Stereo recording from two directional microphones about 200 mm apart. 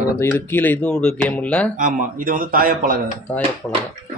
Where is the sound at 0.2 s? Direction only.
10° left (ahead or behind).